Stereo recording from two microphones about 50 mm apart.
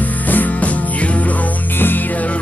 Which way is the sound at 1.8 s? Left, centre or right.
Left.